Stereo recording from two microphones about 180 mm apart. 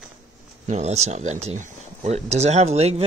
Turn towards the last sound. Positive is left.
turn(degrees=-35)  # may be behind; listen again after turning